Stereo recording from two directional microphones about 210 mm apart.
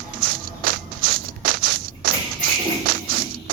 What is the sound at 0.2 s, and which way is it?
Walk, 45° right (ahead or behind).